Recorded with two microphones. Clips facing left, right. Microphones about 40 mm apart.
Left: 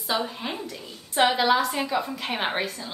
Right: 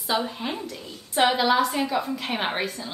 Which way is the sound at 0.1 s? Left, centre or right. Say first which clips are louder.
Right 1 dB; centre.